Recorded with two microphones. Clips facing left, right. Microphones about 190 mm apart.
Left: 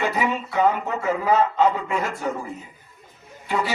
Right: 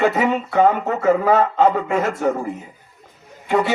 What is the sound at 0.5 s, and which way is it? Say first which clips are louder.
Speech: right 4 dB; 45° right (ahead or behind).